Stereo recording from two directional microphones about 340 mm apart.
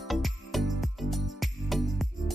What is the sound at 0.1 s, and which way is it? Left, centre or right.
Music, centre.